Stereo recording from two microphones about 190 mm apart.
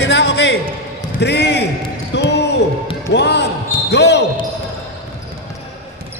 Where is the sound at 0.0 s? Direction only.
65° left (ahead or behind).